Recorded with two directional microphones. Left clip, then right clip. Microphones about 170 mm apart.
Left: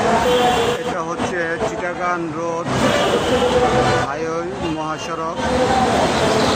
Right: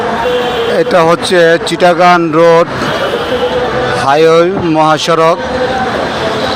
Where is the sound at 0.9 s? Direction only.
40° right (ahead or behind).